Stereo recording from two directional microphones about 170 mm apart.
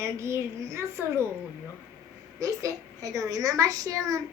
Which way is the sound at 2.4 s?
20° right (ahead or behind).